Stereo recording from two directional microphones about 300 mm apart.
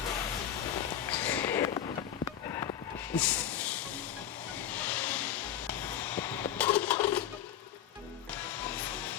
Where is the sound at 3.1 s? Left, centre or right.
Centre.